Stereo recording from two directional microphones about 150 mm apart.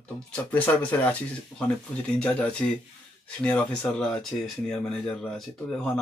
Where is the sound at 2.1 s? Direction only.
5° left (ahead or behind).